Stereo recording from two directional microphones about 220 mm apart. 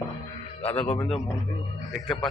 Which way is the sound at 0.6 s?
30° left (ahead or behind).